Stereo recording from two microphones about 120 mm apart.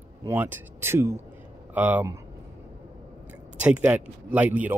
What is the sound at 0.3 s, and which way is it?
Speech, 15° right (ahead or behind).